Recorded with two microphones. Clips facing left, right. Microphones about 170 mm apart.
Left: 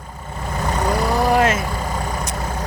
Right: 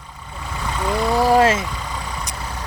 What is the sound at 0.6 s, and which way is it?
Vehicle, 45° left (ahead or behind).